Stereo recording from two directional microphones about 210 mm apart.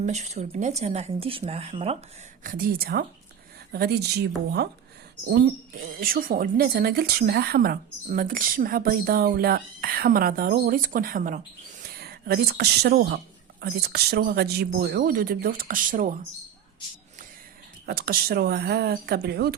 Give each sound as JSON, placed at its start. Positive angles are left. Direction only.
{"t": 0.0, "sound": "speech", "side_deg": -30}
{"t": 2.4, "sound": "speech", "side_deg": -40}
{"t": 6.0, "sound": "speech", "side_deg": -45}
{"t": 17.8, "sound": "speech", "side_deg": -45}